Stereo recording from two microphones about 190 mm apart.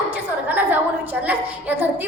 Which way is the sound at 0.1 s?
10° right (ahead or behind).